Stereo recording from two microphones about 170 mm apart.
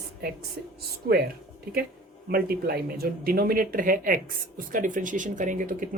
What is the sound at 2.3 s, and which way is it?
Speech, 65° right (ahead or behind).